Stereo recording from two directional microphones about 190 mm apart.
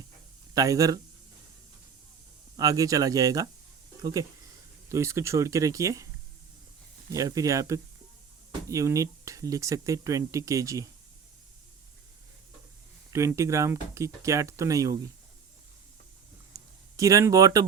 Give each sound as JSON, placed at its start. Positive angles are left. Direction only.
{"t": 0.5, "sound": "speech", "side_deg": -20}
{"t": 2.6, "sound": "speech", "side_deg": -20}
{"t": 7.1, "sound": "speech", "side_deg": -20}
{"t": 13.1, "sound": "speech", "side_deg": -15}
{"t": 16.5, "sound": "a sound", "side_deg": -15}
{"t": 17.0, "sound": "speech", "side_deg": -15}